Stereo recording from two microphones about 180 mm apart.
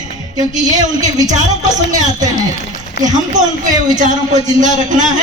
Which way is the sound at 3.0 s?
70° left (ahead or behind).